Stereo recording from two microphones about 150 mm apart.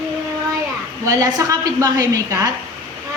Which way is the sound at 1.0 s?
20° right (ahead or behind).